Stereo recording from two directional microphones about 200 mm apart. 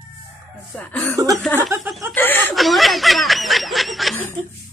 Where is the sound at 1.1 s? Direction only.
15° right (ahead or behind).